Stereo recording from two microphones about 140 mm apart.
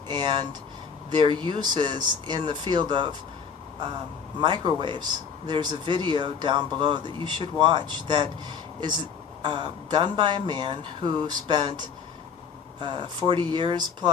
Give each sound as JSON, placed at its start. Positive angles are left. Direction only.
{"t": 0.1, "sound": "speech", "side_deg": -30}
{"t": 4.4, "sound": "speech", "side_deg": -35}